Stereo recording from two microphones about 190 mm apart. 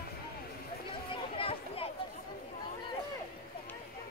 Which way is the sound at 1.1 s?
30° left (ahead or behind).